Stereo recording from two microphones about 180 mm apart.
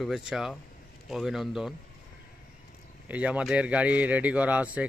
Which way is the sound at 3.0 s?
10° right (ahead or behind).